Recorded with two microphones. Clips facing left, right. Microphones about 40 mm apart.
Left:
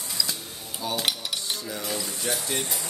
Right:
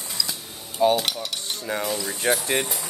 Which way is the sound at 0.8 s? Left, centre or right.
Right.